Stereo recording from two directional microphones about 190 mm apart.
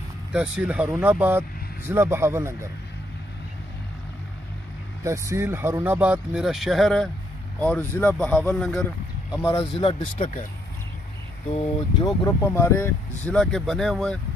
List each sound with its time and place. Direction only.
0.3 s speech: 5° right (ahead or behind)
5.0 s speech: 15° right (ahead or behind); by 8.8 s 5° left (ahead or behind)
9.3 s speech: 20° left (ahead or behind)
9.8 s speech: 30° left (ahead or behind)
12.3 s speech: 15° left (ahead or behind)